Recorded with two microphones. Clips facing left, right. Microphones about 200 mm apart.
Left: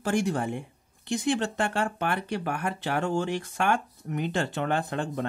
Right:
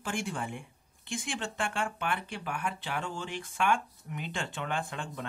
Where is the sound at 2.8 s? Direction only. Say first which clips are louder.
Left 9 dB; 70° left (ahead or behind).